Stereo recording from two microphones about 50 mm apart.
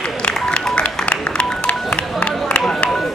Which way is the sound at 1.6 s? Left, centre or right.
Left.